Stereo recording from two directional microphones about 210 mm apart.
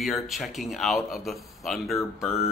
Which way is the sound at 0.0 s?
Centre (ahead or behind).